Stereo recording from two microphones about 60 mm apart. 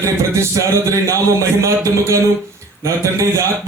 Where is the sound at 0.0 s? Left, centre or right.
Right.